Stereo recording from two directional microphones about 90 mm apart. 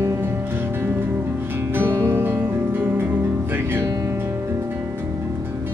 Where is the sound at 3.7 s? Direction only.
40° right (ahead or behind).